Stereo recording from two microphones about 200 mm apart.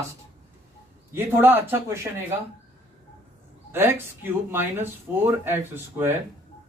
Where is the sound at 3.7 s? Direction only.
10° right (ahead or behind).